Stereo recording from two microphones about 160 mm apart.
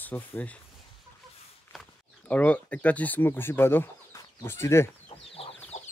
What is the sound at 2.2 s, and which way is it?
Speech, 10° left (ahead or behind).